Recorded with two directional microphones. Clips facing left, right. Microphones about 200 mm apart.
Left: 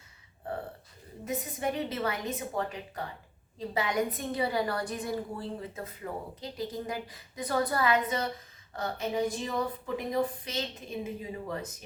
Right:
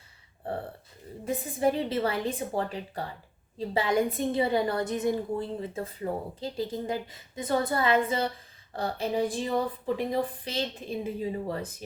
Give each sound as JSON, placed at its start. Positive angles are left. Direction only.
{"t": 1.2, "sound": "a woman's voice", "side_deg": -30}